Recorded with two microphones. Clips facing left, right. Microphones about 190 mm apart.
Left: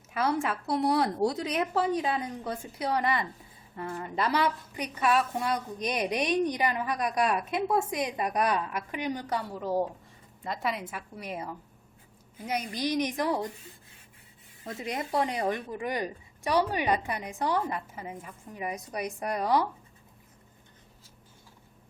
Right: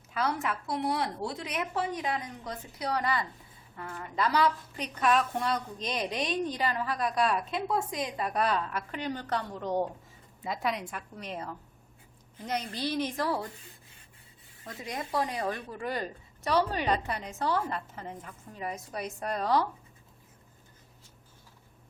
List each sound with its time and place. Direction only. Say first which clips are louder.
0.1 s speech: left 3 dB; 25° left (ahead or behind)
4.8 s a woman's voice: left 1 dB; 5° left (ahead or behind)
14.6 s a woman's voice: left 4 dB; 25° left (ahead or behind)